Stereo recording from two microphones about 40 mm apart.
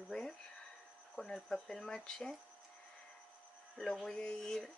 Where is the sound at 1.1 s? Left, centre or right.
Centre.